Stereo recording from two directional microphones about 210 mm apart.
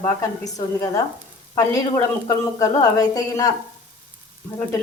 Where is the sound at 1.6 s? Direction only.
15° left (ahead or behind).